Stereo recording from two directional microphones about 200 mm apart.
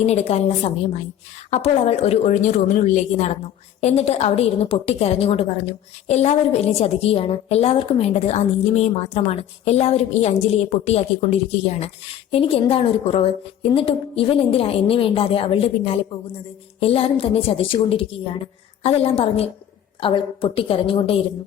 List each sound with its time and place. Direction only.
0.0 s a woman's voice: 35° left (ahead or behind)